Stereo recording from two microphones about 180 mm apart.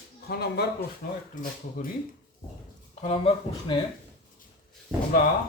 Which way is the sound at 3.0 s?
30° left (ahead or behind).